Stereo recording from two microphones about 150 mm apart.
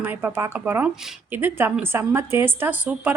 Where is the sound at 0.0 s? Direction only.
15° right (ahead or behind).